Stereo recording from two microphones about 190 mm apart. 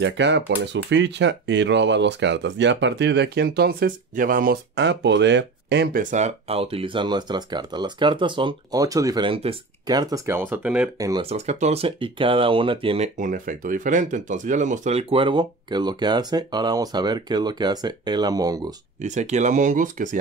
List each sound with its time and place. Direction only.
0.0 s speech: 65° right (ahead or behind); by 4.6 s 45° right (ahead or behind)
4.7 s speech: 65° right (ahead or behind)
6.0 s speech: 35° right (ahead or behind); by 10.9 s 10° right (ahead or behind)
11.0 s speech: 20° right (ahead or behind)
11.2 s speech: 35° right (ahead or behind); by 18.7 s 20° right (ahead or behind)
18.9 s speech: 40° right (ahead or behind)